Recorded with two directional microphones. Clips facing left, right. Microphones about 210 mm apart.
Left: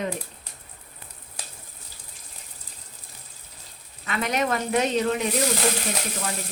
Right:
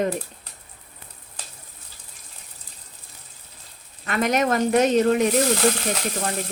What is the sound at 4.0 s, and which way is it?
Speech, 50° right (ahead or behind).